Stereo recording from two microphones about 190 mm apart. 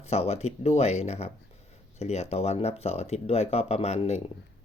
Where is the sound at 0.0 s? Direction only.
35° left (ahead or behind).